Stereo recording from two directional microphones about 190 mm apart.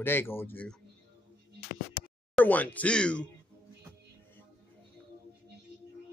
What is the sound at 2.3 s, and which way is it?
Speech, 10° left (ahead or behind).